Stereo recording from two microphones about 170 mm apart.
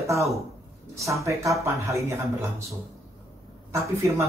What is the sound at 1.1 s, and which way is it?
Speech, 20° right (ahead or behind).